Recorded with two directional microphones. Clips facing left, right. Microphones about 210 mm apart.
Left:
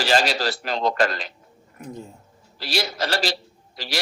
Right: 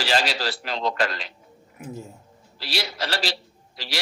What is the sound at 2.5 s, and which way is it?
A man's voice, 45° left (ahead or behind).